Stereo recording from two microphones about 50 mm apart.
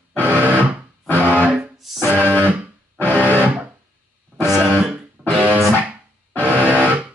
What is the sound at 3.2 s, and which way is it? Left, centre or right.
Music, right.